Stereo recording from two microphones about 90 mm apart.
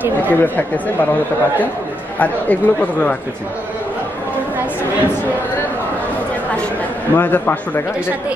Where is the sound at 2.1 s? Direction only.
15° left (ahead or behind).